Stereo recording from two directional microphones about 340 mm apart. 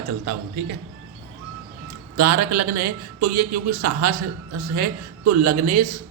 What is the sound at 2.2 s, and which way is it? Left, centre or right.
A man's voice, right.